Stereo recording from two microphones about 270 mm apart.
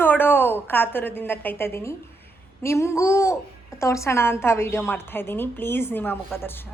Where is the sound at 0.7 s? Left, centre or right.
Centre.